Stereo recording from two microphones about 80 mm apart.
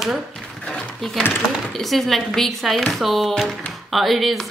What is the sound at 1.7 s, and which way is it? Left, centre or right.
A woman's voice, centre.